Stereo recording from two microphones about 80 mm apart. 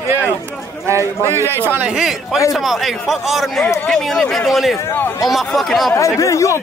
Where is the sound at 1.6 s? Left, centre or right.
Right.